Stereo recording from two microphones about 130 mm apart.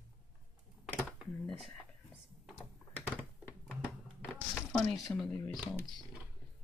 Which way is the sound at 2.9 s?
15° left (ahead or behind).